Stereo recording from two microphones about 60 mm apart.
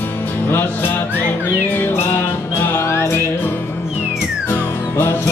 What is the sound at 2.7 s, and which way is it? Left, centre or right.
Music, left.